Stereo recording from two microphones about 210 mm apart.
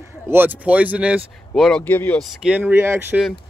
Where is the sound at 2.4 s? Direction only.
5° right (ahead or behind).